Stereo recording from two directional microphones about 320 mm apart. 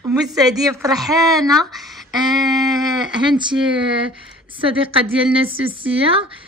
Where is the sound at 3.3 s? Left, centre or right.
Centre.